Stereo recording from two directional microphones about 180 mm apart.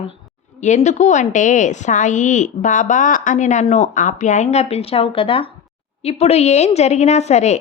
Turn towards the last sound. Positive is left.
turn(degrees=40)  # may be behind; listen again after turning